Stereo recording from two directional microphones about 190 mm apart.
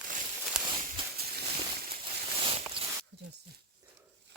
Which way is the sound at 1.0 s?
25° right (ahead or behind).